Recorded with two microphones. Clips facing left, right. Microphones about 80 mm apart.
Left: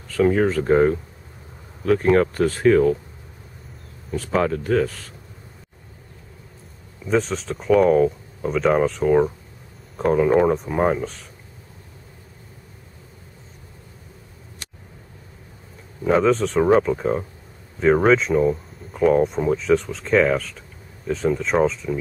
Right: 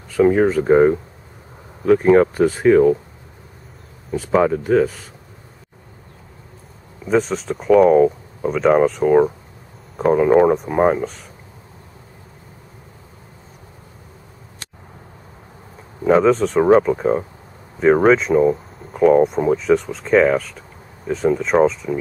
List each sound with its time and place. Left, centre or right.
0.1 s speech: centre
4.1 s speech: centre
7.1 s speech: centre
16.1 s speech: centre